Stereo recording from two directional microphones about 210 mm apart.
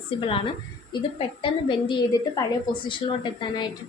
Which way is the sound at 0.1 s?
25° left (ahead or behind).